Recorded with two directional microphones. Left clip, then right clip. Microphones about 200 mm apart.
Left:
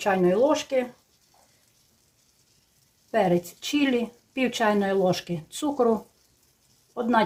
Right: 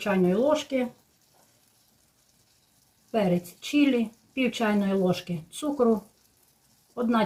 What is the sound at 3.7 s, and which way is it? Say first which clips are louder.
Speech: right 1 dB; 50° left (ahead or behind).